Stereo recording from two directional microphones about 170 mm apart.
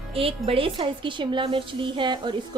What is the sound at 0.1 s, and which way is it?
Speech, 35° right (ahead or behind).